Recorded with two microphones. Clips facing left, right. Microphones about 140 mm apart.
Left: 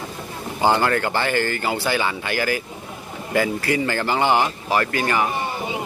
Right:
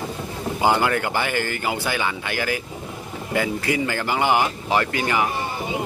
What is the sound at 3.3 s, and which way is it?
Speech, 15° right (ahead or behind).